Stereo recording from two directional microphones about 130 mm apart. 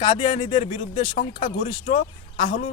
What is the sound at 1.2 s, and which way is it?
Speech, 90° left.